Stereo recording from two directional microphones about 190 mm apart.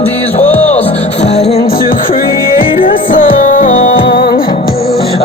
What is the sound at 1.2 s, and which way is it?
Music, 35° left (ahead or behind).